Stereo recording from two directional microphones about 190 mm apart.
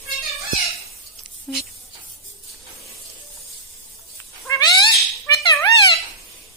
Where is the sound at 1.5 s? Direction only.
Centre (ahead or behind).